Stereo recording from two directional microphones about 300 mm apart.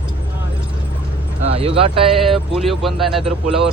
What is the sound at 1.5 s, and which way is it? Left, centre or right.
Speech, centre.